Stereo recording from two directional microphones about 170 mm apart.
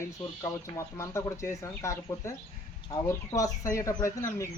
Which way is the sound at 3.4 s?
20° left (ahead or behind).